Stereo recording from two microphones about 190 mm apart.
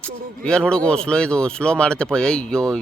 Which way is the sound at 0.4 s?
5° left (ahead or behind).